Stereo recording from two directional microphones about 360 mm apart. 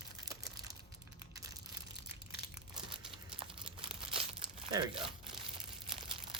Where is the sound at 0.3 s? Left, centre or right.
Centre.